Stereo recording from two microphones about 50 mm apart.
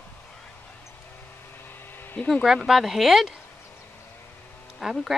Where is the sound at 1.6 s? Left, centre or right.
Left.